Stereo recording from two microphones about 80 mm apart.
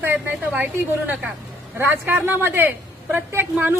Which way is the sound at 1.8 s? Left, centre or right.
Right.